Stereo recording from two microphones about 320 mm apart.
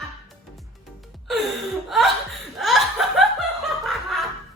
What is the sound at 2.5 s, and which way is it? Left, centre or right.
Laughter, centre.